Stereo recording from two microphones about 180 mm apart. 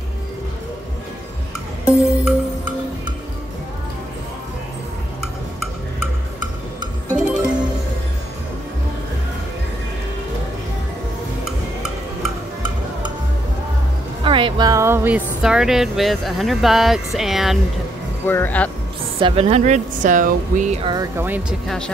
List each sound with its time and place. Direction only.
1.9 s music: 10° right (ahead or behind)
7.2 s music: 5° right (ahead or behind)
14.2 s speech: 25° right (ahead or behind); by 17.6 s centre (ahead or behind)
18.2 s speech: 10° left (ahead or behind)
19.1 s speech: 30° right (ahead or behind)
20.8 s speech: 25° right (ahead or behind)
21.2 s speech: 10° right (ahead or behind)
21.6 s speech: 5° left (ahead or behind)